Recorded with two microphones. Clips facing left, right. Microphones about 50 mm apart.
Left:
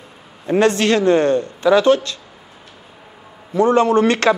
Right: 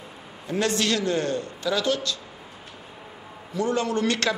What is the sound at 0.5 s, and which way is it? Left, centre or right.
Speech, left.